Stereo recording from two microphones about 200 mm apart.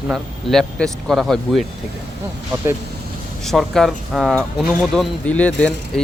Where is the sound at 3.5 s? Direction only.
Centre (ahead or behind).